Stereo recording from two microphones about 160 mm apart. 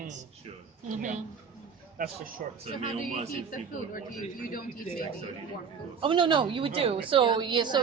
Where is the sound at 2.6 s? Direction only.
40° right (ahead or behind).